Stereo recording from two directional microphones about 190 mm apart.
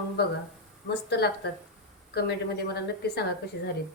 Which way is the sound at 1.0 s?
60° left (ahead or behind).